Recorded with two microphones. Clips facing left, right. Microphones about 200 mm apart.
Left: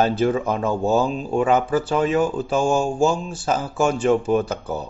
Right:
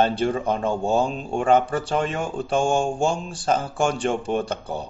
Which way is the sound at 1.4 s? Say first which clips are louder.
Right 2 dB; 5° left (ahead or behind).